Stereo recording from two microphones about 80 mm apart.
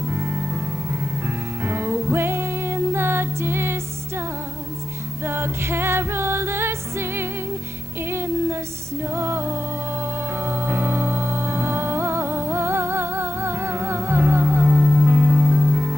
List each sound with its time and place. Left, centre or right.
0.0 s music: right
5.2 s music: right